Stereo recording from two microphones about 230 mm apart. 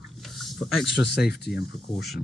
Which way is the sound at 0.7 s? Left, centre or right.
Left.